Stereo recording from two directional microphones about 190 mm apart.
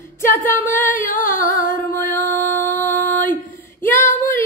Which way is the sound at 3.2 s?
10° left (ahead or behind).